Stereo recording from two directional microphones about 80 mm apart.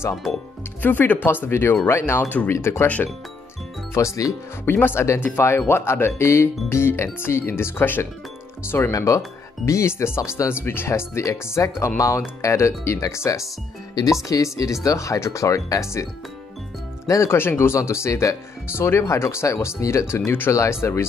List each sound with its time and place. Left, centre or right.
0.1 s speech: centre
0.8 s speech: left
2.5 s speech: left
3.9 s speech: left
4.6 s speech: left
8.9 s speech: left
17.1 s speech: left